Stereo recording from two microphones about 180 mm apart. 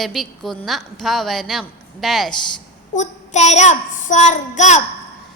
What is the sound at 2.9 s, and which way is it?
Child singing, 40° left (ahead or behind).